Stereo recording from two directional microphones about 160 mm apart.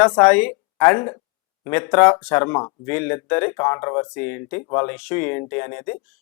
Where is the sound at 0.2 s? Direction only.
10° left (ahead or behind).